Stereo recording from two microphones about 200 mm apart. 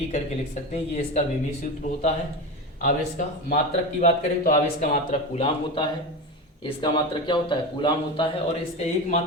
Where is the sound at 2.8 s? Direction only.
40° left (ahead or behind); by 8.2 s 25° left (ahead or behind).